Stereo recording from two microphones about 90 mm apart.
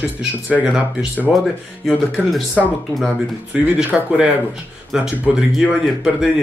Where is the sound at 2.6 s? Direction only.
Centre (ahead or behind).